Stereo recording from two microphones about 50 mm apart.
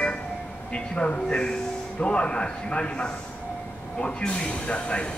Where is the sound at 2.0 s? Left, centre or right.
Left.